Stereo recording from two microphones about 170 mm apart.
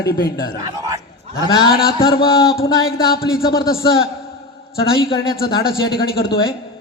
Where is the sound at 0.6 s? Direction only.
20° right (ahead or behind).